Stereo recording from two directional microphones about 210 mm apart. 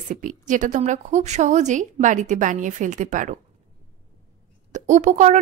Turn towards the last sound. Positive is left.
turn(degrees=-35)  # may be behind; listen again after turning